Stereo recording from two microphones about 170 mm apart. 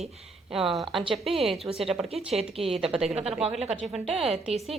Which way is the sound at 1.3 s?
35° right (ahead or behind).